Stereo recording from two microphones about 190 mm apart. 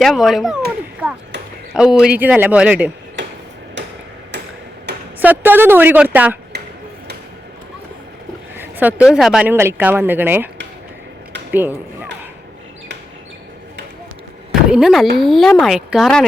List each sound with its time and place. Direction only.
0.0 s a man's voice: centre (ahead or behind)
3.8 s hammer: 65° right (ahead or behind)
4.9 s a sound: 60° right (ahead or behind)
5.2 s speech: 10° right (ahead or behind)
8.5 s speech: 10° right (ahead or behind)
14.7 s a man's voice: 5° right (ahead or behind)